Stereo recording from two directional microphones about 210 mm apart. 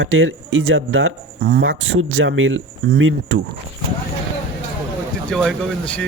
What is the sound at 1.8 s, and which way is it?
Speech, 70° right (ahead or behind).